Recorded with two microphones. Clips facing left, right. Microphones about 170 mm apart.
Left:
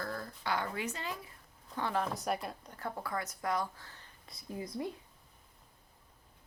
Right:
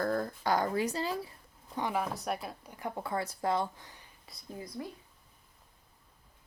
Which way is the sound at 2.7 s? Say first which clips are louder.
Right 4 dB; 20° right (ahead or behind).